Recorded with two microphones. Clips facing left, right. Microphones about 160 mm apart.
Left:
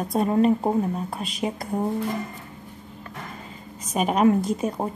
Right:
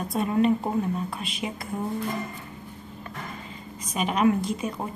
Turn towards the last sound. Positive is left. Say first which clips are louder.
# left 4 dB
turn(degrees=40)  # may be behind; listen again after turning